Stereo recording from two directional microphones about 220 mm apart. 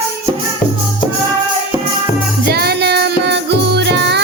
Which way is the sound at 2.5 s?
45° right (ahead or behind).